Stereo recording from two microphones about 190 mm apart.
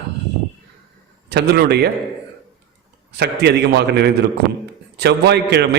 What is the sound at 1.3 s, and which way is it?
Speech, 60° right (ahead or behind).